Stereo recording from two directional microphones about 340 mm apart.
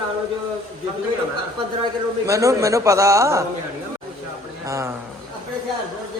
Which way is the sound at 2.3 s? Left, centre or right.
Centre.